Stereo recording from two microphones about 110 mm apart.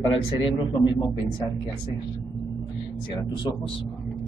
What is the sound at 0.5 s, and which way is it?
Speech, 45° left (ahead or behind).